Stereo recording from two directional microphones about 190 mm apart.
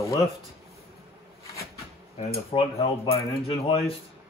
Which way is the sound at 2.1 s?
30° left (ahead or behind).